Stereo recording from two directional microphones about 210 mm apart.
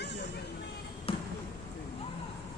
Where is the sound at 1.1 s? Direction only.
25° left (ahead or behind).